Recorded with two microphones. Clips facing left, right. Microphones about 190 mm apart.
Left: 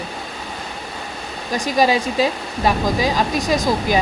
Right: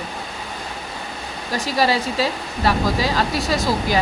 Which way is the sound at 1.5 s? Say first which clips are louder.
Left 3 dB; 15° left (ahead or behind).